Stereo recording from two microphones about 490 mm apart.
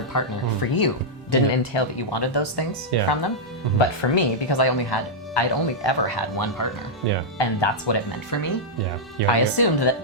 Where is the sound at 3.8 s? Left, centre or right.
Left.